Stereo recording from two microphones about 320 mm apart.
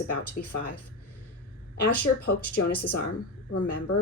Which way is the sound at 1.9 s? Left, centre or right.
Left.